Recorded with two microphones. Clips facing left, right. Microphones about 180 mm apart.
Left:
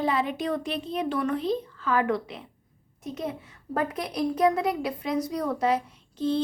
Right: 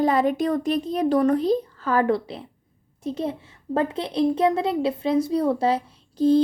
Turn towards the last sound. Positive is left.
turn(degrees=-40)  # may be behind; listen again after turning